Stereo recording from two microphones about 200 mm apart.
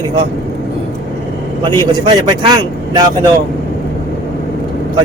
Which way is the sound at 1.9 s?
25° right (ahead or behind).